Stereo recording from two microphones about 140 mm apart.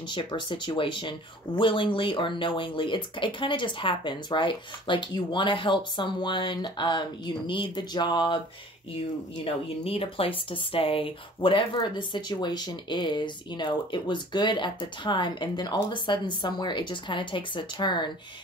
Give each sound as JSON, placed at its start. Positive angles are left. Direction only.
{"t": 0.1, "sound": "speech", "side_deg": 35}
{"t": 9.4, "sound": "speech", "side_deg": 40}